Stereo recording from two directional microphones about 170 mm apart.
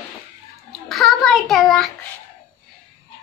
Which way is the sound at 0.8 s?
Centre (ahead or behind).